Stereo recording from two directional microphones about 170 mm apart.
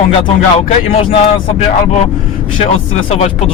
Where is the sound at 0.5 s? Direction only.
35° left (ahead or behind).